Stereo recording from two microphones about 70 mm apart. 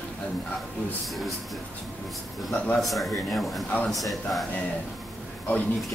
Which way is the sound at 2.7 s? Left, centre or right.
Centre.